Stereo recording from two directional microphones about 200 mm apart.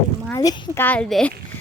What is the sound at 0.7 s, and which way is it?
Speech, 10° left (ahead or behind).